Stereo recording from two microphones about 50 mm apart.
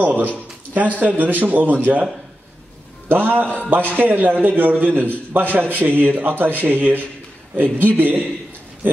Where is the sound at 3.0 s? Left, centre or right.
Right.